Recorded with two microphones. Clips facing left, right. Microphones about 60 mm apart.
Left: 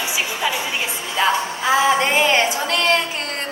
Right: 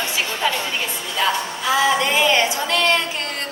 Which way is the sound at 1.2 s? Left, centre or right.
Left.